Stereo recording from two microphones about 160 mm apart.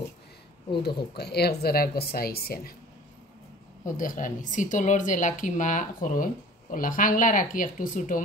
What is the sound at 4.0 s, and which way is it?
Speech, 55° left (ahead or behind).